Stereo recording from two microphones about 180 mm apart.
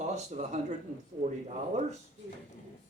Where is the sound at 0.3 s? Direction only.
40° right (ahead or behind).